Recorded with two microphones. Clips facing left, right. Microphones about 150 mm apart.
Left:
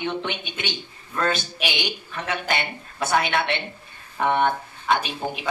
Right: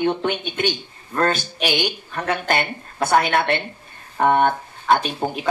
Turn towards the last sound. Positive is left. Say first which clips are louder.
# right 4 dB
turn(degrees=-45)  # may be behind; listen again after turning